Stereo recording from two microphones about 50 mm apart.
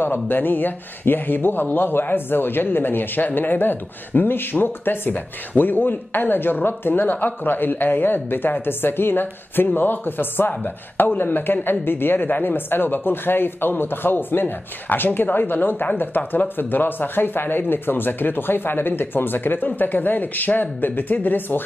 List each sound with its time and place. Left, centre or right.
0.0 s speech: left